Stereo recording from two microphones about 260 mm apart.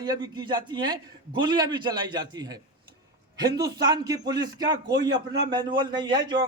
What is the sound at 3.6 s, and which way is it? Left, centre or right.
A man's voice, centre.